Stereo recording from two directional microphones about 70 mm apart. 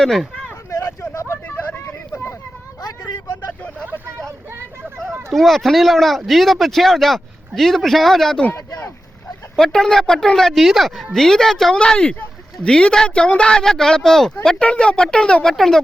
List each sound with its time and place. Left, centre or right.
0.0 s speech: centre
0.7 s a sound: left
1.5 s vehicle: left
5.3 s speech: centre
9.7 s speech: centre
14.6 s speech: centre